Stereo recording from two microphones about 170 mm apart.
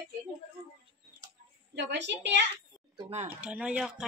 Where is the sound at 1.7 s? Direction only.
90° right.